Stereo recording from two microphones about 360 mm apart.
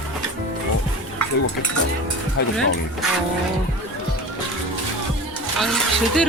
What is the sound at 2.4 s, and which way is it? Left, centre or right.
Speech, left.